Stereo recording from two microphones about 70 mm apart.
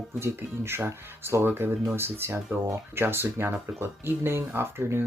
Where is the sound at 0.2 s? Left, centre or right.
Right.